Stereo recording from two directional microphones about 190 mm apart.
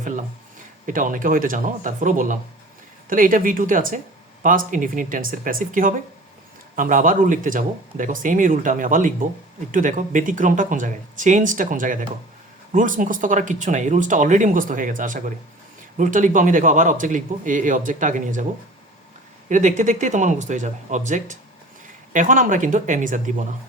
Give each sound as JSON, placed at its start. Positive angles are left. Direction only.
{"t": 0.0, "sound": "a sound", "side_deg": -40}
{"t": 0.9, "sound": "speech", "side_deg": -45}
{"t": 19.5, "sound": "speech", "side_deg": -40}